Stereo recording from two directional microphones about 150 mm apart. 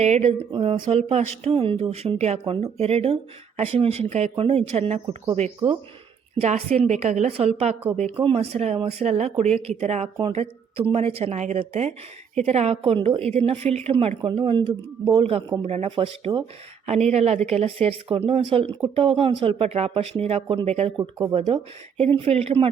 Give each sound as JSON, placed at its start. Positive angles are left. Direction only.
{"t": 0.0, "sound": "speech", "side_deg": -45}
{"t": 6.4, "sound": "speech", "side_deg": -45}
{"t": 21.0, "sound": "speech", "side_deg": -20}
{"t": 21.3, "sound": "speech", "side_deg": -40}